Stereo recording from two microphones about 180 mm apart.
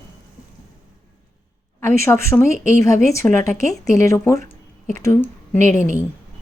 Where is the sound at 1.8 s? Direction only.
15° left (ahead or behind).